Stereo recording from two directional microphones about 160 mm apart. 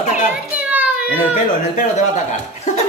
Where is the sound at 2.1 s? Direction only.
50° left (ahead or behind).